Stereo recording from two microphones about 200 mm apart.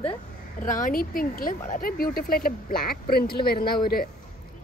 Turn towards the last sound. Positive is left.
turn(degrees=50)  # may be behind; listen again after turning